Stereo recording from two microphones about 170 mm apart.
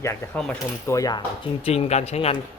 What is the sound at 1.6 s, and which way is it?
Speech, 35° left (ahead or behind).